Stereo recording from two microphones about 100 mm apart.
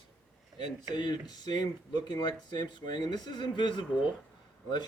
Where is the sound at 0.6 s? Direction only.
45° left (ahead or behind).